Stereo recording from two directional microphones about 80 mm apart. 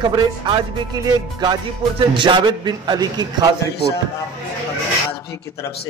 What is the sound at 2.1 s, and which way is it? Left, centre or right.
A man's voice, right.